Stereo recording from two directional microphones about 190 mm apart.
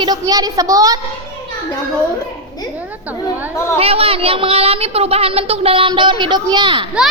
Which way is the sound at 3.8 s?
30° right (ahead or behind).